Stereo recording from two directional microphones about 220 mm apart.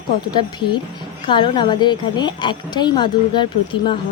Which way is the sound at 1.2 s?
20° left (ahead or behind).